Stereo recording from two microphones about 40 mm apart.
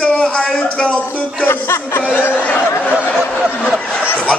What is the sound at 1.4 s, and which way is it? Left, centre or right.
Speech, left.